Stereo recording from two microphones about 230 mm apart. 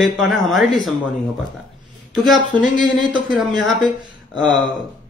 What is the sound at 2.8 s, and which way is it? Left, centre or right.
Speech, centre.